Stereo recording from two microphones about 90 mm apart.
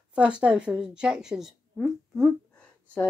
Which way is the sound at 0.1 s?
10° right (ahead or behind).